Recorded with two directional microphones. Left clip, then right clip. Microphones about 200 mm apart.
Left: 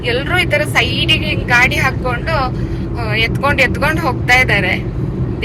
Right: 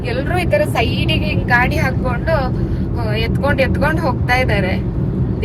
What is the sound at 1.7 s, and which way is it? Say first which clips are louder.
Speech: left 4 dB; 20° right (ahead or behind).